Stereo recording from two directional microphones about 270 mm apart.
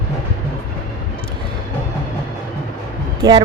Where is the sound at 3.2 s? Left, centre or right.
Centre.